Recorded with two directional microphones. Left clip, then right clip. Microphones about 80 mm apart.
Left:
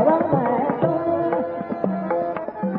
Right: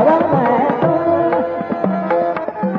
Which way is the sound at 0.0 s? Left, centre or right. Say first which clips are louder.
Right 6 dB; right.